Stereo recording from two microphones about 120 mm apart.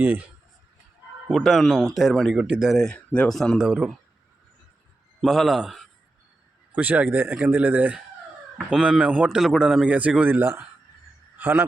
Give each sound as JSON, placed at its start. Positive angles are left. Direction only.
{"t": 0.0, "sound": "a man's voice", "side_deg": -15}
{"t": 1.3, "sound": "speech", "side_deg": 0}
{"t": 2.7, "sound": "a man's voice", "side_deg": 5}
{"t": 5.2, "sound": "speech", "side_deg": 0}
{"t": 6.7, "sound": "a man's voice", "side_deg": -15}
{"t": 8.5, "sound": "a man's voice", "side_deg": -5}